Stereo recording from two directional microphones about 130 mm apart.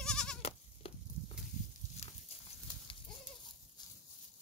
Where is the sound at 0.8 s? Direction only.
45° left (ahead or behind).